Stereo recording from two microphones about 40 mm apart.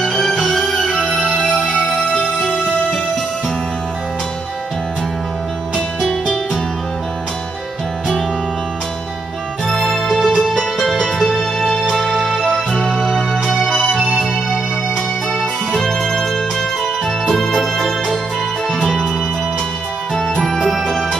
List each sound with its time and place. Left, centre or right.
0.4 s music: centre
10.1 s music: centre
15.7 s music: centre
17.3 s music: centre
20.2 s music: centre